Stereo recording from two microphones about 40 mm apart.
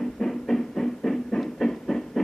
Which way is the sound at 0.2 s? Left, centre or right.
Centre.